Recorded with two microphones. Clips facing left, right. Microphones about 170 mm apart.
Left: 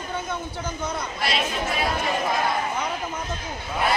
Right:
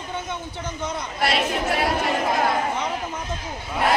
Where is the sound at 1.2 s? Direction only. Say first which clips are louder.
Right 5 dB; 60° right (ahead or behind).